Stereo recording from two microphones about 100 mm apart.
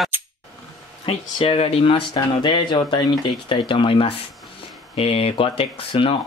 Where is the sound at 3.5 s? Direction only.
60° left (ahead or behind).